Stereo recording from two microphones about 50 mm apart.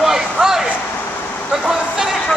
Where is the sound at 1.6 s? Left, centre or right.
Centre.